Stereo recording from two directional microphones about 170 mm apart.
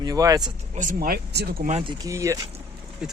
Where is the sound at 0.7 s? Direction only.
50° right (ahead or behind).